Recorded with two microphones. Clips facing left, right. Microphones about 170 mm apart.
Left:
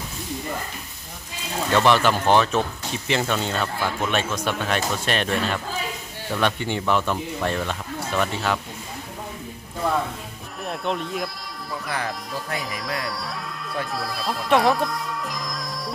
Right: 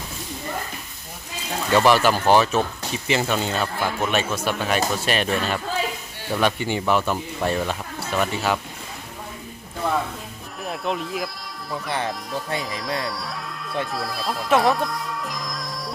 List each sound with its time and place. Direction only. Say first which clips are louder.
1.7 s speech: right 2 dB; 5° right (ahead or behind)
9.8 s music: even; centre (ahead or behind)
10.6 s speech: even; centre (ahead or behind)
11.9 s speech: right 2 dB; 25° right (ahead or behind)
13.1 s speech: even; centre (ahead or behind)